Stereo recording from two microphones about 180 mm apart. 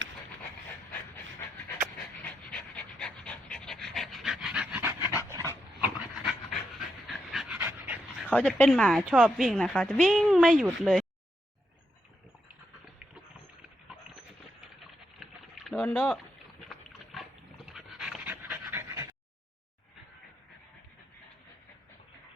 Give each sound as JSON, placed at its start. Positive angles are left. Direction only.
{"t": 2.2, "sound": "pant", "side_deg": 5}
{"t": 5.8, "sound": "dog", "side_deg": -5}
{"t": 8.4, "sound": "a woman's voice", "side_deg": 5}
{"t": 15.2, "sound": "a sound", "side_deg": 5}
{"t": 16.6, "sound": "pig", "side_deg": 0}
{"t": 17.7, "sound": "pant", "side_deg": 0}